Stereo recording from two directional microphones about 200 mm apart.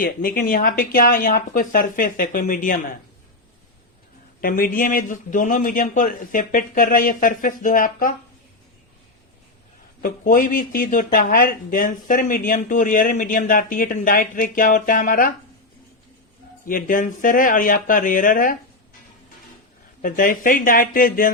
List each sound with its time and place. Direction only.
0.0 s speech: 45° left (ahead or behind)
4.4 s speech: 45° left (ahead or behind)
10.0 s speech: 45° left (ahead or behind)
16.6 s speech: 45° left (ahead or behind)
20.0 s speech: 45° left (ahead or behind)